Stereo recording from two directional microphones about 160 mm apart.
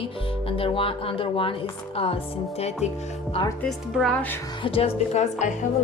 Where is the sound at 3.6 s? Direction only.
Centre (ahead or behind).